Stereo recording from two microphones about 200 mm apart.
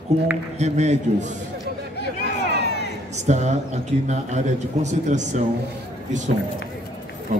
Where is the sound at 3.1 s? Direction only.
35° right (ahead or behind).